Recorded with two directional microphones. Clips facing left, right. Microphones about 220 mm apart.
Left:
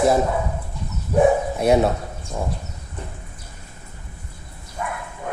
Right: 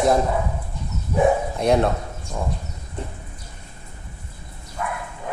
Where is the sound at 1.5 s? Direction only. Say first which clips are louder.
Left 2 dB; 5° left (ahead or behind).